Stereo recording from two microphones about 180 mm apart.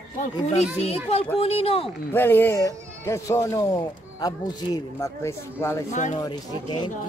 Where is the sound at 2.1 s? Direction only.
10° left (ahead or behind).